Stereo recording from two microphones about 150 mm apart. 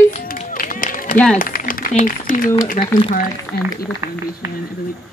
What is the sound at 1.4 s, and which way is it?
Speech, 70° left (ahead or behind).